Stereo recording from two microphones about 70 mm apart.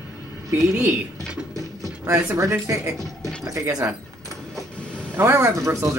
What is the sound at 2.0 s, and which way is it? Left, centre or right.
Speech, right.